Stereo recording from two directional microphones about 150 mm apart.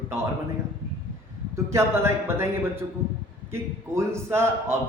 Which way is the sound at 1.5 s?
15° right (ahead or behind).